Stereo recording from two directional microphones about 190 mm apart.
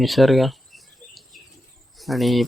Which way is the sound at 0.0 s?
Centre (ahead or behind).